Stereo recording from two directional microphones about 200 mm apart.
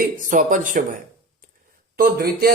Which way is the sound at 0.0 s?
40° right (ahead or behind).